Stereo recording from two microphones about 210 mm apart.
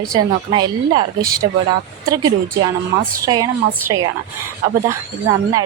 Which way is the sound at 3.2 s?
15° right (ahead or behind).